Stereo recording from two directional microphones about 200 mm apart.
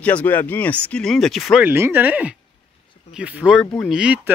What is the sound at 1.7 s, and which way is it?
Speech, 10° right (ahead or behind).